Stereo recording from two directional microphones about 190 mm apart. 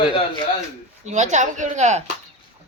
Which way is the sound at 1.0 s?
40° right (ahead or behind).